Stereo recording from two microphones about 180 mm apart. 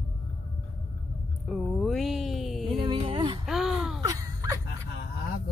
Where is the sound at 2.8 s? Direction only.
30° right (ahead or behind).